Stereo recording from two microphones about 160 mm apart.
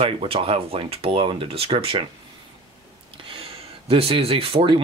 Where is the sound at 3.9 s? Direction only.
40° right (ahead or behind).